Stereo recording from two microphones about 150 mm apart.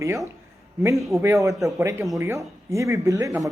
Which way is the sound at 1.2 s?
20° right (ahead or behind).